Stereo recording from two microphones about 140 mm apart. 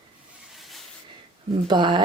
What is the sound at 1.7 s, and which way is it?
Speech, 35° right (ahead or behind).